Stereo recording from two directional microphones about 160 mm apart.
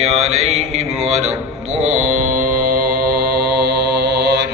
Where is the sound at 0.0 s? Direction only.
40° right (ahead or behind).